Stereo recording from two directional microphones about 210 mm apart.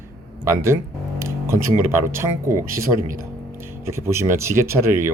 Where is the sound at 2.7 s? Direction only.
40° right (ahead or behind).